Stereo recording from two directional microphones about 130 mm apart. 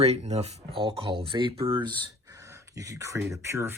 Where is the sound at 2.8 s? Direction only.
25° right (ahead or behind).